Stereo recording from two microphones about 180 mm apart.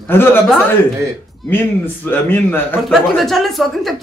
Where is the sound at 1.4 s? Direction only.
10° left (ahead or behind).